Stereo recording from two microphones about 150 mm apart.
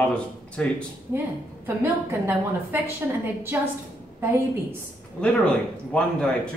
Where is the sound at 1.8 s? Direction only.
15° right (ahead or behind).